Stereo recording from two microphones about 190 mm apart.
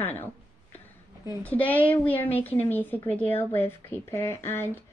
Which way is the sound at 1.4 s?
10° left (ahead or behind).